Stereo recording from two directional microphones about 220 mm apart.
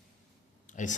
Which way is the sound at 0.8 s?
35° left (ahead or behind).